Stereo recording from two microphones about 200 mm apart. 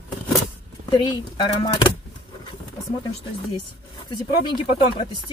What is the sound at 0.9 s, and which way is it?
Speech, 25° left (ahead or behind).